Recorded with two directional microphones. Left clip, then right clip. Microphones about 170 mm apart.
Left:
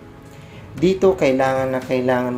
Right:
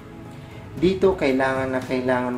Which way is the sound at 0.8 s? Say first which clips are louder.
Left 4 dB; 20° left (ahead or behind).